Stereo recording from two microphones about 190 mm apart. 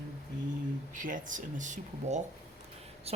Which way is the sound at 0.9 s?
45° right (ahead or behind).